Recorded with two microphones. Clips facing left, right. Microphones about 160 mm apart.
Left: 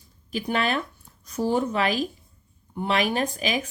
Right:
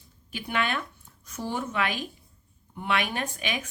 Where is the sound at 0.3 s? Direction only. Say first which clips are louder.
Left 4 dB; 35° left (ahead or behind).